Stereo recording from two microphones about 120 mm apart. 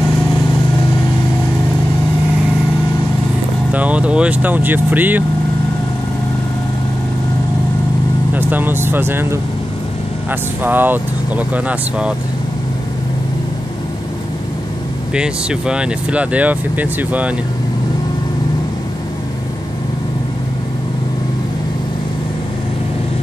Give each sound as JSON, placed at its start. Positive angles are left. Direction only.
{"t": 3.7, "sound": "speech", "side_deg": -10}
{"t": 8.3, "sound": "speech", "side_deg": -15}
{"t": 10.6, "sound": "speech", "side_deg": -15}
{"t": 15.1, "sound": "speech", "side_deg": -5}